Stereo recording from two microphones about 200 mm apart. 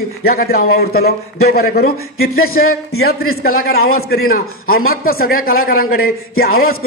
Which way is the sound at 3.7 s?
90° left.